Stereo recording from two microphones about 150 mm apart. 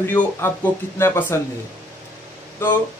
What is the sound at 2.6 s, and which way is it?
Speech, 15° left (ahead or behind).